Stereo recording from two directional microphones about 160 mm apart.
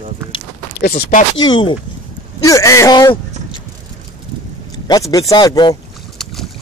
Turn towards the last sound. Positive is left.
turn(degrees=25)  # may be behind; listen again after turning